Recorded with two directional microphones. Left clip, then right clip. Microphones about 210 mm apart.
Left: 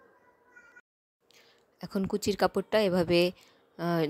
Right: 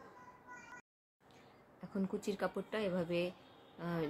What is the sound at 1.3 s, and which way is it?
A woman's voice, 40° left (ahead or behind).